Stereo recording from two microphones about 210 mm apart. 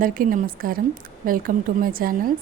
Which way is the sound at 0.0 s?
40° right (ahead or behind).